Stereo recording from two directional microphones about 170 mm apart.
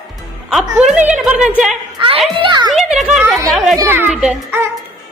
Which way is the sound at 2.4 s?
25° right (ahead or behind).